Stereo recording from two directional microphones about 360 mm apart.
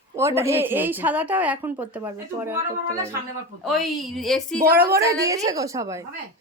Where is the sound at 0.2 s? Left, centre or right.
Centre.